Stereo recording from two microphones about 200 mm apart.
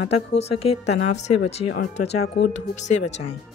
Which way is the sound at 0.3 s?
30° left (ahead or behind).